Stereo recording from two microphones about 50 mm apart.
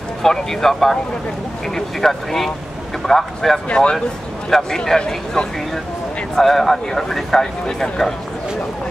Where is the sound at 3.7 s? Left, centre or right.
Centre.